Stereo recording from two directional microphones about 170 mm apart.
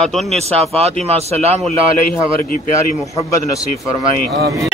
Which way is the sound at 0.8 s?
40° right (ahead or behind).